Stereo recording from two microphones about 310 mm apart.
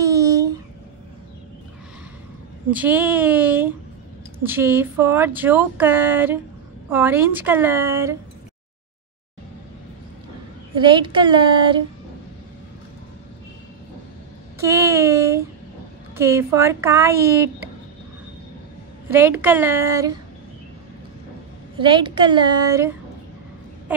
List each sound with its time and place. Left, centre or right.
0.0 s a sound: centre
2.7 s speech: centre
10.7 s speech: centre
14.6 s a sound: centre
16.2 s speech: centre
19.0 s speech: centre
21.7 s speech: centre